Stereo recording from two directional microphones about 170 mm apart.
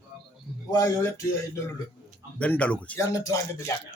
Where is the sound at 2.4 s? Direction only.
10° left (ahead or behind).